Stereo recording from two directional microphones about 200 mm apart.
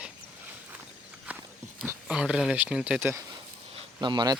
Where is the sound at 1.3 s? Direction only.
5° right (ahead or behind).